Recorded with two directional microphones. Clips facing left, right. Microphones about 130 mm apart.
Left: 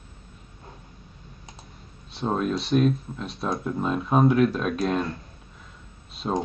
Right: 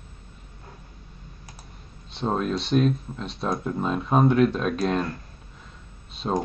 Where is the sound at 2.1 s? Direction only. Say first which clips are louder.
Even; centre (ahead or behind).